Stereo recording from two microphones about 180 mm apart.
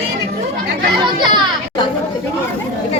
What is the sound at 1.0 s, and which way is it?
Chatter, 25° right (ahead or behind).